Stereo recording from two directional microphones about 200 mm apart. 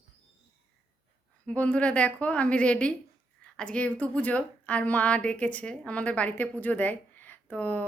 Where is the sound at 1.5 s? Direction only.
5° left (ahead or behind).